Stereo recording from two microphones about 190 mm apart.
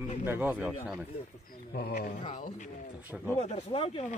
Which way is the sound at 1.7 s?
50° left (ahead or behind).